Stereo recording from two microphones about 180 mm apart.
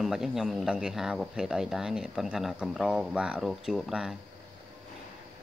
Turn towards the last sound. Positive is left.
turn(degrees=0)  # may be behind; listen again after turning